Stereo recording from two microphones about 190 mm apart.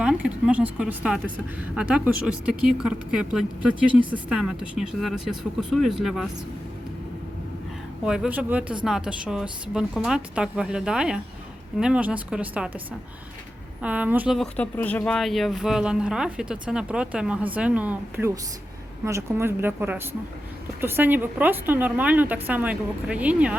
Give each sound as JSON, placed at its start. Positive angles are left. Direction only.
{"t": 0.0, "sound": "speech", "side_deg": -5}
{"t": 8.0, "sound": "speech", "side_deg": -5}
{"t": 13.8, "sound": "a woman's voice", "side_deg": -5}